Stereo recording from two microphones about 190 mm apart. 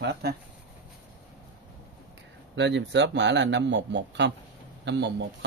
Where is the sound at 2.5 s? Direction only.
70° right (ahead or behind).